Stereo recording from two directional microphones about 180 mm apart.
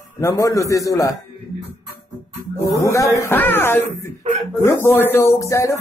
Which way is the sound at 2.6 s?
15° left (ahead or behind).